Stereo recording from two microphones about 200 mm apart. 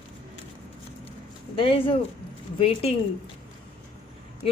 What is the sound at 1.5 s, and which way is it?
Speech, 25° left (ahead or behind).